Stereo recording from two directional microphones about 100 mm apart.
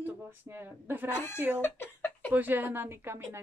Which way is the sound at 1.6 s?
20° left (ahead or behind).